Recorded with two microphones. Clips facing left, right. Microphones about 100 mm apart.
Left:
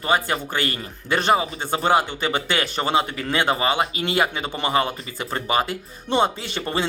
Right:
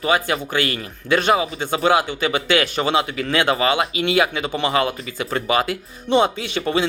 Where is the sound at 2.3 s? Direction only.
45° left (ahead or behind).